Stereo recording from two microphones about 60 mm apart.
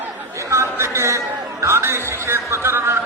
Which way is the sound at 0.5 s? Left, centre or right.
Right.